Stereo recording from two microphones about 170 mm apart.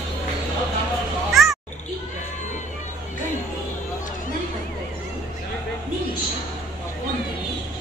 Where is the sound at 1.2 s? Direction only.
Centre (ahead or behind).